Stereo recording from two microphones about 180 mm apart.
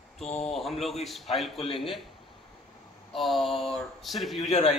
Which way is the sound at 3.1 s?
Centre (ahead or behind).